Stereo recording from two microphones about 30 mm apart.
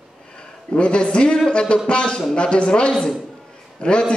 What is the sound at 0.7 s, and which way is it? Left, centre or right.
A man's voice, left.